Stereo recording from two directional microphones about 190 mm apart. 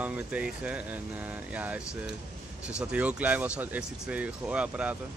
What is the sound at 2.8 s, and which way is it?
Speech, 5° right (ahead or behind).